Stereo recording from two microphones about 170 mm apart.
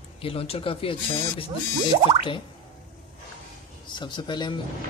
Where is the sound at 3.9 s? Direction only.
25° left (ahead or behind).